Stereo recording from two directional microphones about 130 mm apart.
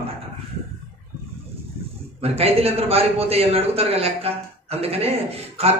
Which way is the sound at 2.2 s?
50° right (ahead or behind).